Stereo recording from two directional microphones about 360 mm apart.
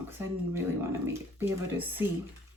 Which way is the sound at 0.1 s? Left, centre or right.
Centre.